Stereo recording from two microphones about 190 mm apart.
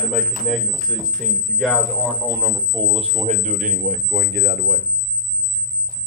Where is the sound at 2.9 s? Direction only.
35° right (ahead or behind); by 4.8 s 60° right (ahead or behind).